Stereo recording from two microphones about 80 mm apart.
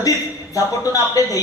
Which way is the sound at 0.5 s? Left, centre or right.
Left.